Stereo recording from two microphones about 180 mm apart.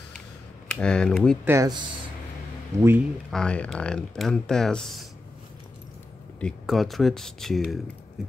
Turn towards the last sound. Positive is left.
turn(degrees=0)  # may be behind; listen again after turning